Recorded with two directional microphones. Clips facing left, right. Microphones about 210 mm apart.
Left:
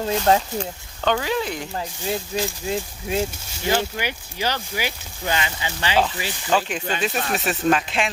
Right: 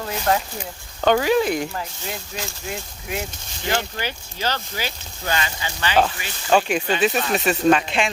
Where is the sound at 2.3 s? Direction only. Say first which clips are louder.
Left 6 dB; 30° left (ahead or behind).